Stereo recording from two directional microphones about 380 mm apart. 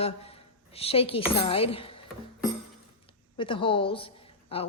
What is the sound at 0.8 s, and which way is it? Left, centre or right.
A woman's voice, centre.